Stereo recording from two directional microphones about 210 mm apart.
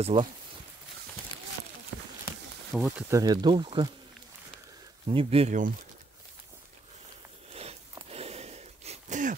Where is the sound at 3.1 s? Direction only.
20° right (ahead or behind).